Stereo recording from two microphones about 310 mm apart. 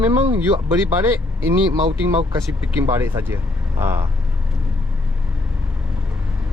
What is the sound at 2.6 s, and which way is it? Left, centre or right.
Speech, centre.